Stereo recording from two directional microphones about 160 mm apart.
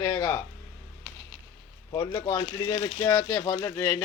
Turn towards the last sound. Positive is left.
turn(degrees=20)  # may be behind; listen again after turning